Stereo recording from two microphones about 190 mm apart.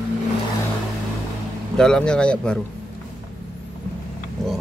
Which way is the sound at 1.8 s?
5° left (ahead or behind).